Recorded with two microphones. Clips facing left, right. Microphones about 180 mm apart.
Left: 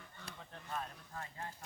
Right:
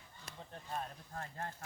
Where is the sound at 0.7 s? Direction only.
40° right (ahead or behind).